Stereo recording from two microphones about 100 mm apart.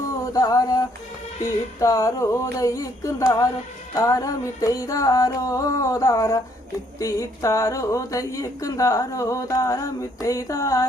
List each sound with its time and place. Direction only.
0.3 s a woman's voice: 35° left (ahead or behind)